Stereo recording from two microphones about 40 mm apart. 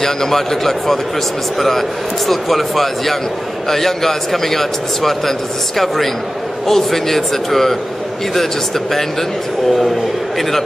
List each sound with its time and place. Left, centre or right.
0.0 s a man's voice: centre
6.7 s a man's voice: centre